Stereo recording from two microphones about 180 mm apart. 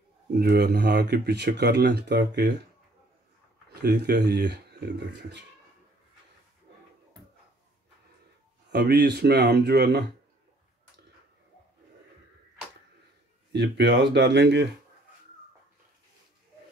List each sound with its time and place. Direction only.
0.3 s speech: 60° right (ahead or behind)
3.8 s speech: 60° right (ahead or behind)
8.7 s speech: 65° right (ahead or behind)
13.5 s speech: 75° right (ahead or behind)